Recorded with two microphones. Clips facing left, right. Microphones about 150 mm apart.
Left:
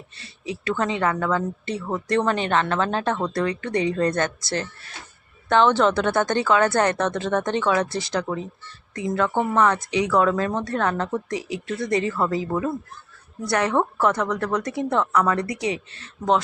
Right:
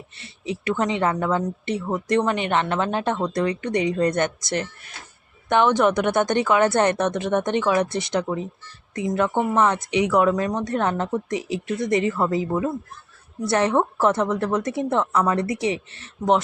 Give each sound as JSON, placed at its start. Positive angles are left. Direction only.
{"t": 0.2, "sound": "a woman's voice", "side_deg": -20}
{"t": 13.4, "sound": "a woman's voice", "side_deg": -25}